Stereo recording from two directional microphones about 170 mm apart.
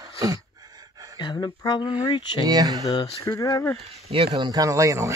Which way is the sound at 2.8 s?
20° left (ahead or behind).